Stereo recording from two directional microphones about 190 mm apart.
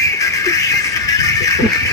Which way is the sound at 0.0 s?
15° left (ahead or behind).